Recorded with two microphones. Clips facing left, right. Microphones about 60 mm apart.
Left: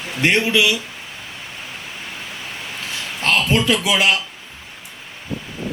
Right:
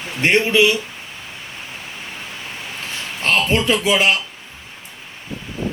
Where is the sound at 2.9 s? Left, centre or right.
Right.